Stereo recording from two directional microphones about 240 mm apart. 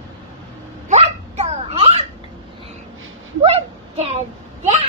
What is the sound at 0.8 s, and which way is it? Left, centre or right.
Hiccup, right.